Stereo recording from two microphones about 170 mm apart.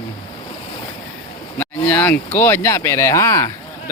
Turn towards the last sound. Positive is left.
turn(degrees=15)  # may be behind; listen again after turning